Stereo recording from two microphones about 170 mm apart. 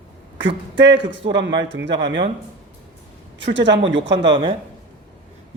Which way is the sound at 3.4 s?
90° right.